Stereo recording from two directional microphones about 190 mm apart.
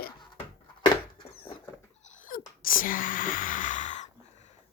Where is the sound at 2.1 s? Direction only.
45° left (ahead or behind).